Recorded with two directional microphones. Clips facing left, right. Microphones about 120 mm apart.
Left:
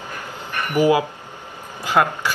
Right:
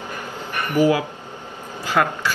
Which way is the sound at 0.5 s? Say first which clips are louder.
Even; 15° right (ahead or behind).